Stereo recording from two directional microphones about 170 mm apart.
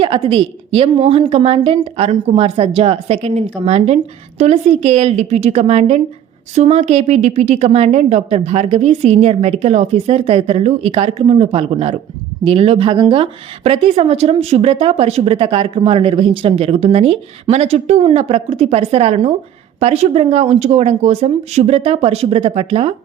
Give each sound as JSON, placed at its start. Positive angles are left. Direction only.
{"t": 0.0, "sound": "speech", "side_deg": -30}